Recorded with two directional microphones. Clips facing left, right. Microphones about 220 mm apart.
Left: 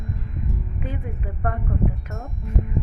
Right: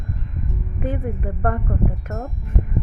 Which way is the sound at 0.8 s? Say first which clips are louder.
Right 9 dB; 50° right (ahead or behind).